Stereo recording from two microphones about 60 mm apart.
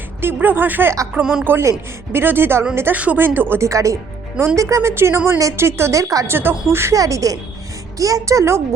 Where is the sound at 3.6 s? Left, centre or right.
Right.